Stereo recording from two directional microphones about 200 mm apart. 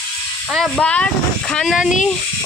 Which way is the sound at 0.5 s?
5° left (ahead or behind).